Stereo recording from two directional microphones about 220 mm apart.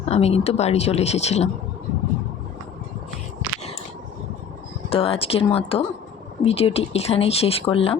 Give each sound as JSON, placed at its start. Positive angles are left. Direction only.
{"t": 0.0, "sound": "speech", "side_deg": 30}
{"t": 4.9, "sound": "speech", "side_deg": 25}